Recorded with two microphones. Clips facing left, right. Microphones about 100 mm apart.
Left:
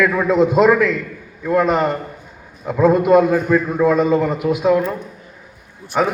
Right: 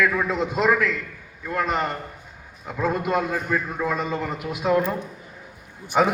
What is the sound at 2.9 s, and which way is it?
Speech, 80° left.